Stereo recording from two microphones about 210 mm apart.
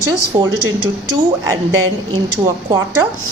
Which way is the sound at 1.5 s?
15° right (ahead or behind).